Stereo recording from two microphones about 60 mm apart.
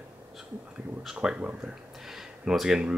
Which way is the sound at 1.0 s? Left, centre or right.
Centre.